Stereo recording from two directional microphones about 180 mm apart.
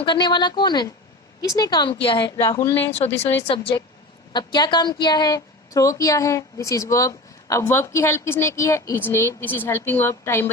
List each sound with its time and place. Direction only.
0.0 s a woman's voice: 25° left (ahead or behind)